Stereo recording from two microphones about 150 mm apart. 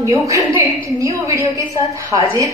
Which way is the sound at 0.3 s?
20° right (ahead or behind).